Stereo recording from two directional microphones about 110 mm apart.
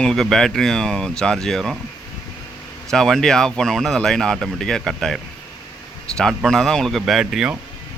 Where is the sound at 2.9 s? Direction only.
5° left (ahead or behind).